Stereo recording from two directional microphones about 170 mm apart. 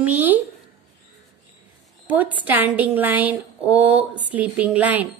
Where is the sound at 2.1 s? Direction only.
10° right (ahead or behind).